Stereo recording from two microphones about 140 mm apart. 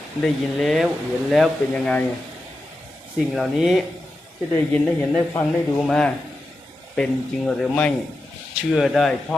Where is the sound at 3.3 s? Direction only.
Centre (ahead or behind).